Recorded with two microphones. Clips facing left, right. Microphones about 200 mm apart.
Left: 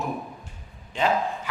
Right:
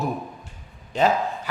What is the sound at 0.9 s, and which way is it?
Speech, 40° right (ahead or behind).